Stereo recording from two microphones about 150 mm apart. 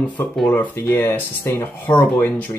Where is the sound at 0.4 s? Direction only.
10° left (ahead or behind).